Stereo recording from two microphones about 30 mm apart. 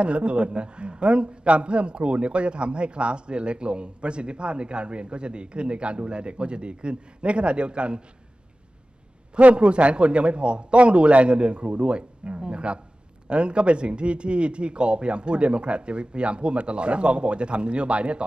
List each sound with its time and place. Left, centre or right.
0.0 s a man's voice: right
9.6 s a man's voice: right